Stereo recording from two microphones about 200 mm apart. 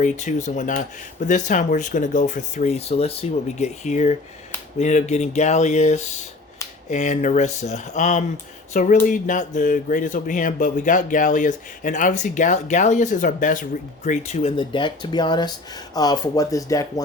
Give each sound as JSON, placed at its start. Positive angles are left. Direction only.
{"t": 0.0, "sound": "speech", "side_deg": 35}